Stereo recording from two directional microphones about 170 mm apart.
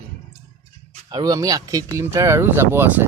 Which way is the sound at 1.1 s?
20° right (ahead or behind).